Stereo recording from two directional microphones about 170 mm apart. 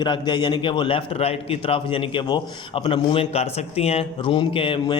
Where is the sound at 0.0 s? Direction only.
25° left (ahead or behind).